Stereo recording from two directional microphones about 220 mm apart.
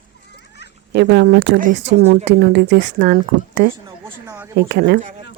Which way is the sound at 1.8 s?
30° right (ahead or behind).